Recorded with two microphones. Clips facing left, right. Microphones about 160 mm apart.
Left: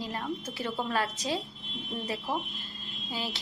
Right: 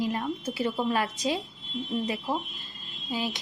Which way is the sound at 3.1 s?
15° right (ahead or behind).